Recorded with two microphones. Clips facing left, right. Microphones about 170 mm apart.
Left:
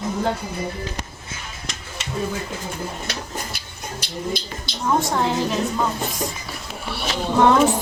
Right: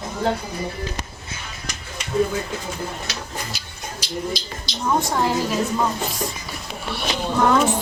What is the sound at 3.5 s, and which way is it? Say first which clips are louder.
Music: left 1 dB; 55° left (ahead or behind).